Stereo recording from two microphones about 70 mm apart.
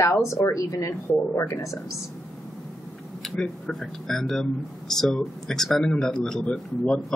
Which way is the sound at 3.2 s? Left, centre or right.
Centre.